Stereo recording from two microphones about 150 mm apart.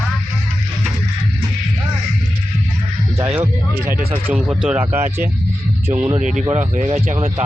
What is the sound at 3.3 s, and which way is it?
Speech, 15° right (ahead or behind).